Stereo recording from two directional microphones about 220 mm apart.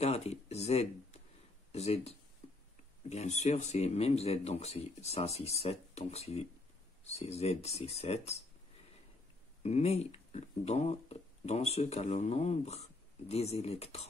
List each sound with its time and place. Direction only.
0.0 s a sound: 30° left (ahead or behind)
1.7 s speech: 30° left (ahead or behind)
9.6 s speech: 30° left (ahead or behind)